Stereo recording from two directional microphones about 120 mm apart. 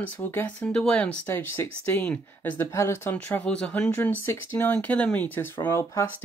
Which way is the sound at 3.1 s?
10° left (ahead or behind).